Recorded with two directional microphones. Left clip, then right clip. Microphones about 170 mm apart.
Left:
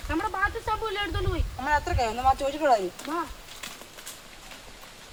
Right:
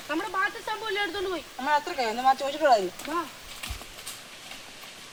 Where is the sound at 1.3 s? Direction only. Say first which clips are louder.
Even; centre (ahead or behind).